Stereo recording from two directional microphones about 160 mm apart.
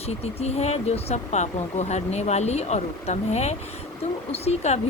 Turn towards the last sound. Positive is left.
turn(degrees=45)  # may be behind; listen again after turning